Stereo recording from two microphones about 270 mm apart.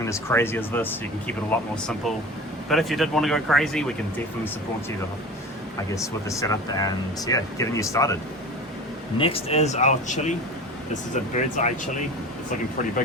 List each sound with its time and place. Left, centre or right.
0.0 s speech: centre
5.9 s speech: centre
9.1 s speech: left